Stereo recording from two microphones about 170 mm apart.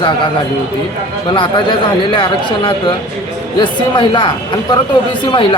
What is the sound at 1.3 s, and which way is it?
A man's voice, 30° left (ahead or behind).